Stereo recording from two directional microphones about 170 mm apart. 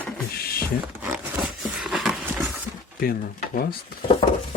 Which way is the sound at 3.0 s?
60° left (ahead or behind).